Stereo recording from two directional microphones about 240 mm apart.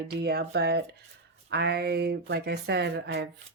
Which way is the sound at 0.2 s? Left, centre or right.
Right.